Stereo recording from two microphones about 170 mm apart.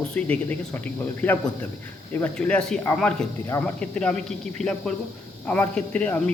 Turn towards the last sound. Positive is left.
turn(degrees=10)  # may be behind; listen again after turning